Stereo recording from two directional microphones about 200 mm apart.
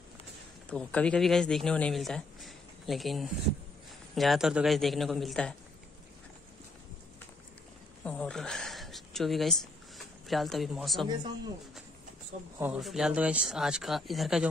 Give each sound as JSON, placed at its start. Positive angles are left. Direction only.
{"t": 0.7, "sound": "speech", "side_deg": 5}
{"t": 8.0, "sound": "speech", "side_deg": 5}
{"t": 12.5, "sound": "speech", "side_deg": -5}